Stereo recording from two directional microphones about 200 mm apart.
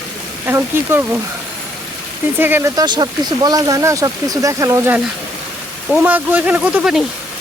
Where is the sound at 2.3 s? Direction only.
10° right (ahead or behind).